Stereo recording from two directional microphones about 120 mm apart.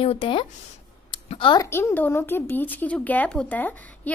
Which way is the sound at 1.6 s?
20° left (ahead or behind).